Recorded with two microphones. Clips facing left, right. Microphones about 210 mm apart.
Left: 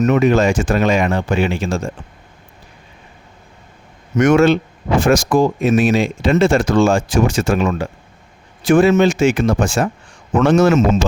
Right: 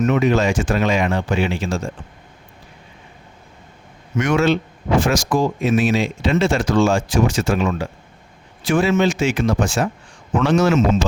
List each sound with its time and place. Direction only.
0.0 s speech: 45° left (ahead or behind)
4.1 s speech: 45° left (ahead or behind)